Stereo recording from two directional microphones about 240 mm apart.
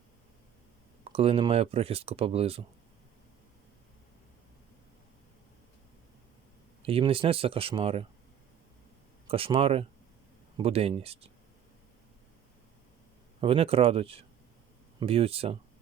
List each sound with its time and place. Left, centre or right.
1.0 s speech: right
6.8 s speech: right
9.2 s speech: right
13.4 s speech: right